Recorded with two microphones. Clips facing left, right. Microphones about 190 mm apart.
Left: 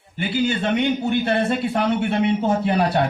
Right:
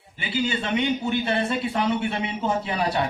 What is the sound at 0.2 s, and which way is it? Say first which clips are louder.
A man's voice: left 5 dB; 55° left (ahead or behind).